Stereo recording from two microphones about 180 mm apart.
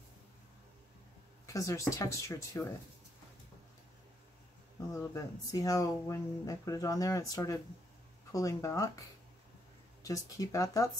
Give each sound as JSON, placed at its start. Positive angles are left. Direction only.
{"t": 1.4, "sound": "speech", "side_deg": 15}
{"t": 4.9, "sound": "speech", "side_deg": 20}
{"t": 10.0, "sound": "speech", "side_deg": 20}